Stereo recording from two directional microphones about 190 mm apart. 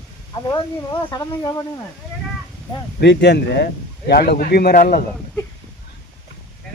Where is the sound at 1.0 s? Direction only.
20° left (ahead or behind).